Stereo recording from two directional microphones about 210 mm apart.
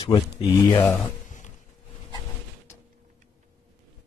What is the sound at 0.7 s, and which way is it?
Speech, 10° left (ahead or behind).